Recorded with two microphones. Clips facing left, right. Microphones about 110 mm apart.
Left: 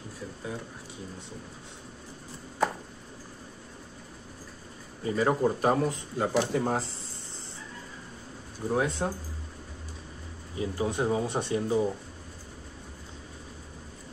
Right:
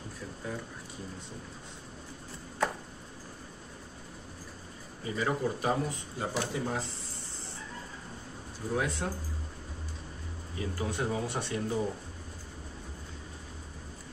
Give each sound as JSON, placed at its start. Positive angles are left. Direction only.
{"t": 5.0, "sound": "speech", "side_deg": 45}
{"t": 8.7, "sound": "speech", "side_deg": 30}
{"t": 10.6, "sound": "speech", "side_deg": 25}